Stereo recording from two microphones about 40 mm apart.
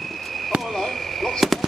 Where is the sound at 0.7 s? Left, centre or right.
Centre.